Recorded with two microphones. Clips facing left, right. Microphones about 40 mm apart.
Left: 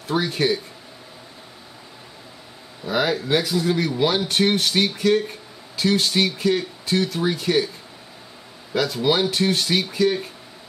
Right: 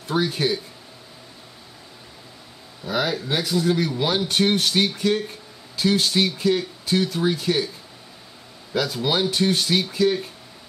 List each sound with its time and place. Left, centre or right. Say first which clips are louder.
0.1 s speech: left 1 dB; centre
2.8 s speech: left 2 dB; centre
8.7 s speech: left 2 dB; centre